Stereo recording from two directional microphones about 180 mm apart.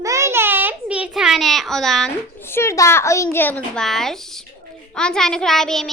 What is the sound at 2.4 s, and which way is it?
A child's voice, 15° left (ahead or behind).